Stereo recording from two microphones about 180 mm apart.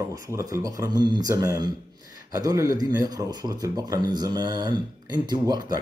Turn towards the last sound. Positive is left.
turn(degrees=-25)  # may be behind; listen again after turning